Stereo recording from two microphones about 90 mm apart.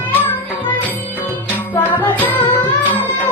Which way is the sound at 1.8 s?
20° left (ahead or behind).